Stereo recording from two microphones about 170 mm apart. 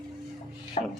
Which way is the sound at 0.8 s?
40° left (ahead or behind).